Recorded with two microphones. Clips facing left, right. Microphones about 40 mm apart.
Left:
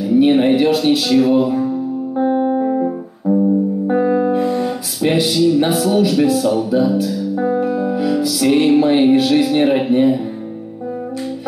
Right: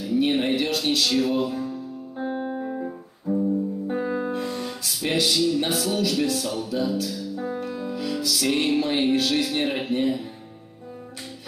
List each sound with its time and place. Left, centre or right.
0.1 s speech: centre
2.1 s music: centre
3.9 s speech: centre